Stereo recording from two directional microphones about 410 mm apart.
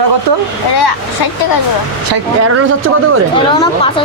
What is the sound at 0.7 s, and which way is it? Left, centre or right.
Speech, left.